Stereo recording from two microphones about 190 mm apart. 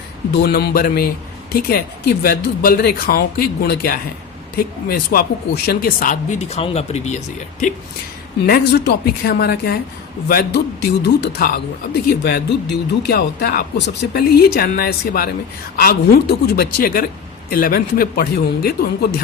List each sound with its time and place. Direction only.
0.3 s speech: 55° left (ahead or behind); by 7.2 s 35° left (ahead or behind)
8.4 s a woman's voice: 55° left (ahead or behind)